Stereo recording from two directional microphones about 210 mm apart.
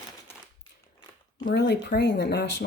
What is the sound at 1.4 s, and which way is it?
Speech, 50° left (ahead or behind).